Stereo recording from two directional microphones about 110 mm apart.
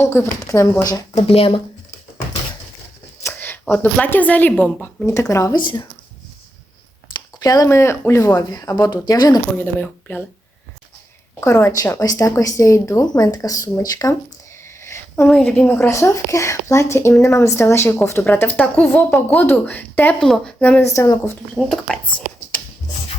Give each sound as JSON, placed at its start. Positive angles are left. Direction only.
{"t": 0.0, "sound": "speech", "side_deg": 25}
{"t": 1.1, "sound": "speech", "side_deg": 60}
{"t": 3.2, "sound": "a woman's voice", "side_deg": 15}
{"t": 5.3, "sound": "speech", "side_deg": 30}
{"t": 5.5, "sound": "speech", "side_deg": 45}
{"t": 7.1, "sound": "speech", "side_deg": 35}
{"t": 9.6, "sound": "speech", "side_deg": 15}
{"t": 11.3, "sound": "speech", "side_deg": 25}
{"t": 14.8, "sound": "a sound", "side_deg": 25}
{"t": 15.3, "sound": "speech", "side_deg": 10}
{"t": 20.1, "sound": "speech", "side_deg": 5}
{"t": 20.6, "sound": "a woman's voice", "side_deg": 15}
{"t": 20.8, "sound": "speech", "side_deg": 25}
{"t": 21.5, "sound": "speech", "side_deg": 5}